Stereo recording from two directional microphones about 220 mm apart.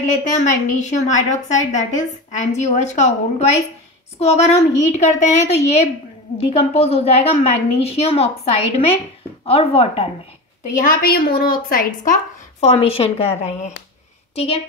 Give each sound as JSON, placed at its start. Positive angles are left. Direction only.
{"t": 0.0, "sound": "a woman's voice", "side_deg": 35}
{"t": 10.7, "sound": "a woman's voice", "side_deg": 40}
{"t": 12.5, "sound": "a woman's voice", "side_deg": 25}